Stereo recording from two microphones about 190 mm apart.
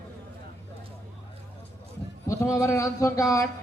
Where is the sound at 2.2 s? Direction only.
15° left (ahead or behind).